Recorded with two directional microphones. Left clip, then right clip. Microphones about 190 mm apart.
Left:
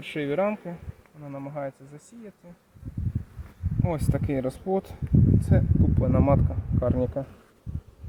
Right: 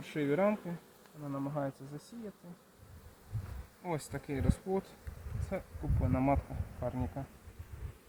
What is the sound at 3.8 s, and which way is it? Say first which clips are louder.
Speech: left 9 dB; 50° left (ahead or behind).